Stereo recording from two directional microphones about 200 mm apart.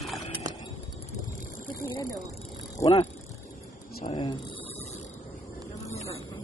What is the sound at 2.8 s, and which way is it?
Speech, 15° left (ahead or behind).